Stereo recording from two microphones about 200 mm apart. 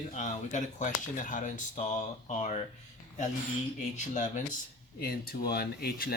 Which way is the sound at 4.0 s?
35° left (ahead or behind).